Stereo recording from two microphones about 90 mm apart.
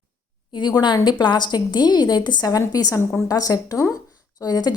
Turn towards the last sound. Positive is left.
turn(degrees=45)  # may be behind; listen again after turning